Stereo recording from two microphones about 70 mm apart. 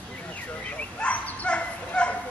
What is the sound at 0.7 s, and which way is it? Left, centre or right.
Bow-wow, centre.